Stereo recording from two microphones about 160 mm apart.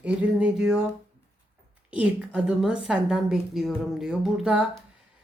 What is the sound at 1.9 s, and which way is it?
Speech, 5° right (ahead or behind).